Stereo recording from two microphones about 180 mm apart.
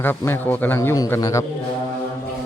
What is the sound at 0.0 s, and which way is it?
A man's voice, 10° left (ahead or behind).